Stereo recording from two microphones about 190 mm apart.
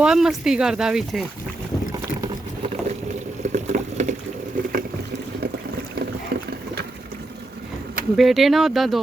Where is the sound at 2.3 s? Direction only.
35° right (ahead or behind).